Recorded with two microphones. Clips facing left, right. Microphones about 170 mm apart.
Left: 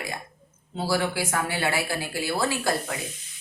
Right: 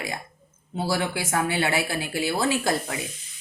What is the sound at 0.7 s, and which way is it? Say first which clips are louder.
Speech: even; 20° right (ahead or behind).